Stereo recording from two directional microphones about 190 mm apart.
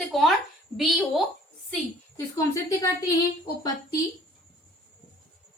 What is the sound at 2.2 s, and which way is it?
Speech, 15° left (ahead or behind).